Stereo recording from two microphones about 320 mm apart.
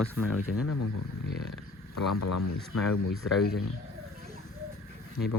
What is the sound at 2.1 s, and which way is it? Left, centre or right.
Speech, left.